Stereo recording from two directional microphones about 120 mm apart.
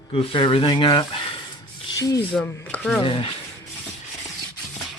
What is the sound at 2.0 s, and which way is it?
Speech, 30° left (ahead or behind).